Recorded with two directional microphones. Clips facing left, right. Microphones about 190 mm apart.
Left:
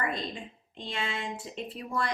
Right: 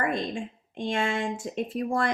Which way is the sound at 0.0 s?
50° right (ahead or behind).